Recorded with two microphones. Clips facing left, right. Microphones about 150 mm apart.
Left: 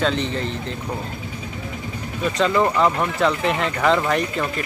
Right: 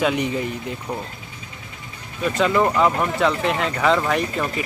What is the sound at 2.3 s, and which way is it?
Speech, centre (ahead or behind).